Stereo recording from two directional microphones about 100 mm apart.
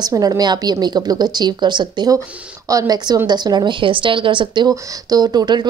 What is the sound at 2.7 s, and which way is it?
Speech, 35° right (ahead or behind).